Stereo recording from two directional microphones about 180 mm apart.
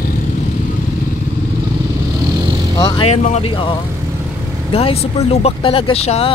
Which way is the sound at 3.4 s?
30° left (ahead or behind).